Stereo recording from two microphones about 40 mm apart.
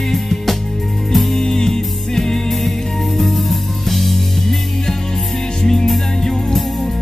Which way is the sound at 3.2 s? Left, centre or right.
Centre.